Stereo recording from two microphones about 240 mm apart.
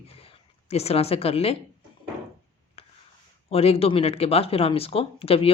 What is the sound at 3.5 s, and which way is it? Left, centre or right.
Speech, left.